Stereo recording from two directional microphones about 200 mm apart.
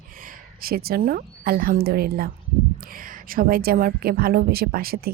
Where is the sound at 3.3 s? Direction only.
45° right (ahead or behind).